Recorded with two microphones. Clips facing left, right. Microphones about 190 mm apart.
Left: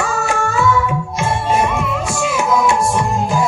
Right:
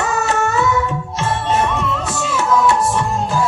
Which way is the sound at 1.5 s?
10° left (ahead or behind).